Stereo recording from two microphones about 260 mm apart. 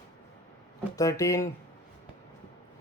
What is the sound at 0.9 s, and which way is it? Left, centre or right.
Speech, centre.